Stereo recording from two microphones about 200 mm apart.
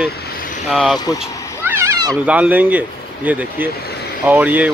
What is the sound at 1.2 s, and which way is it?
Cat, 10° right (ahead or behind).